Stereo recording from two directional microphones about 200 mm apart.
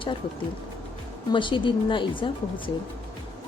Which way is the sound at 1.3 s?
25° left (ahead or behind).